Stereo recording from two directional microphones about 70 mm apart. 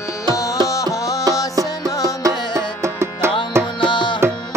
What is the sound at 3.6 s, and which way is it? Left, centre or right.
Music, left.